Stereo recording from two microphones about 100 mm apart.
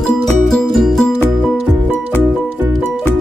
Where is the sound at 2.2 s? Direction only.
20° right (ahead or behind).